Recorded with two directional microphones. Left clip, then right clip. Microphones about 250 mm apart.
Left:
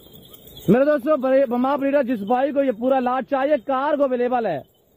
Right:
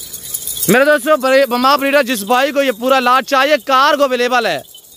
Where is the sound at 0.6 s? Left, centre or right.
Centre.